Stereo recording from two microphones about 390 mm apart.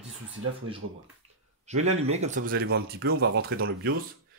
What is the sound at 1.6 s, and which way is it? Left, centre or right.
Speech, centre.